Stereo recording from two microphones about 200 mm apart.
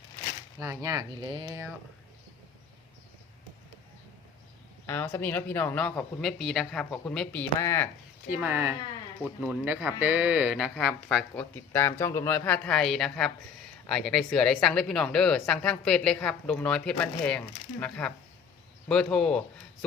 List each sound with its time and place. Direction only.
0.6 s speech: 15° right (ahead or behind)
1.5 s speech: 10° right (ahead or behind)
4.9 s speech: 10° left (ahead or behind)
8.3 s speech: 10° right (ahead or behind)
11.5 s speech: 10° left (ahead or behind)